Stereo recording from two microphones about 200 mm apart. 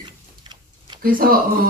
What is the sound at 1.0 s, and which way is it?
Speech, 45° right (ahead or behind).